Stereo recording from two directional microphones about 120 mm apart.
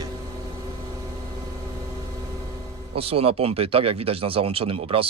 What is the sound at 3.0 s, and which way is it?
Speech, 55° right (ahead or behind).